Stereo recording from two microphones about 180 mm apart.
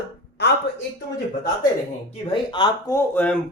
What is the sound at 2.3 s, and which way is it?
Speech, 25° left (ahead or behind).